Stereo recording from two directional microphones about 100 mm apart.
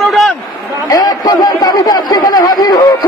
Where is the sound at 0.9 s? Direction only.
40° left (ahead or behind).